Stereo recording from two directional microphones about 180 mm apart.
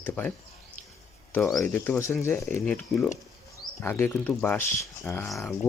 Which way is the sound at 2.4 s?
5° left (ahead or behind).